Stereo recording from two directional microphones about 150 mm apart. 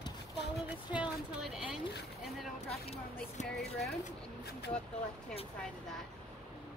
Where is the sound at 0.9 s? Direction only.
5° right (ahead or behind).